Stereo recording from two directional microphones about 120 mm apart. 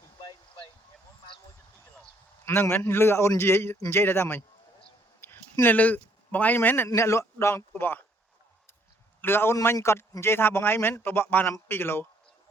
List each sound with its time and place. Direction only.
2.4 s a man's voice: 20° left (ahead or behind)
9.2 s a man's voice: 20° left (ahead or behind)